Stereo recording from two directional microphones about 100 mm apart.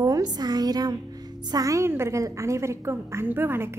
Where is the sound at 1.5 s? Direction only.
35° right (ahead or behind).